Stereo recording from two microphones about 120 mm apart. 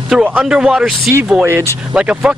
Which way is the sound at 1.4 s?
20° right (ahead or behind).